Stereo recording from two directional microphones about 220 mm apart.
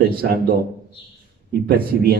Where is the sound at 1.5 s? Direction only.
45° right (ahead or behind).